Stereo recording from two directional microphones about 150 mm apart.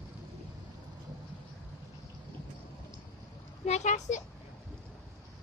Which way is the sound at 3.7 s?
50° left (ahead or behind).